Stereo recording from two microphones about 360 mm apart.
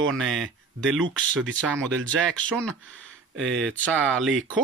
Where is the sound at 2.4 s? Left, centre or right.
Centre.